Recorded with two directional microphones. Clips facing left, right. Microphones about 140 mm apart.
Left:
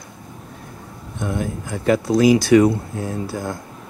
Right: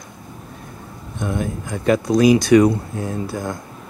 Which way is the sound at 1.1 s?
20° right (ahead or behind).